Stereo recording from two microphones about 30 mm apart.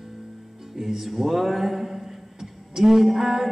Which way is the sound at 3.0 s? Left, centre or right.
Centre.